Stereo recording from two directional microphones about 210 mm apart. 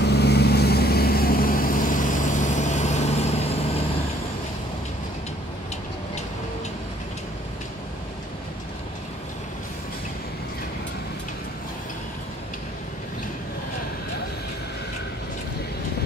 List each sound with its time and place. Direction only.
0.0 s vehicle: 50° left (ahead or behind); by 3.8 s 30° left (ahead or behind)